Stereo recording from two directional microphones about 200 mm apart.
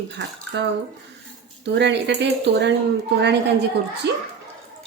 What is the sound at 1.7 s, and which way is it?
Speech, 60° right (ahead or behind).